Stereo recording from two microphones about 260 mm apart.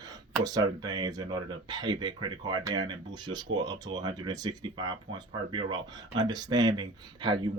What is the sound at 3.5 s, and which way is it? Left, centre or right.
Speech, right.